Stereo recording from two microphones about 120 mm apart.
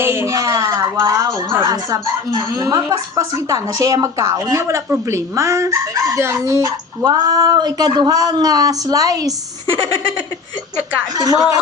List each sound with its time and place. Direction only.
0.0 s a woman's voice: 20° right (ahead or behind)
11.1 s a woman's voice: 30° right (ahead or behind)